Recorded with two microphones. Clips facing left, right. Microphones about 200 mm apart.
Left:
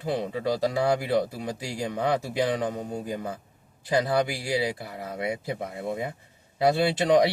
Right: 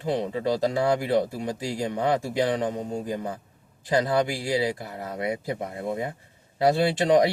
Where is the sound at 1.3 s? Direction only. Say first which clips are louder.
Right 3 dB; 40° right (ahead or behind).